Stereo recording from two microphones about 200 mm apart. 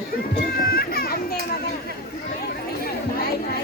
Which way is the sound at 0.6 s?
50° left (ahead or behind).